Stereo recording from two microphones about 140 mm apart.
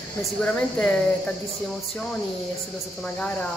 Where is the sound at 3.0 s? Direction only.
10° left (ahead or behind).